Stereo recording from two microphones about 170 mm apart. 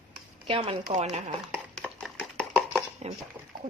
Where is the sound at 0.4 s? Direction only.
35° right (ahead or behind).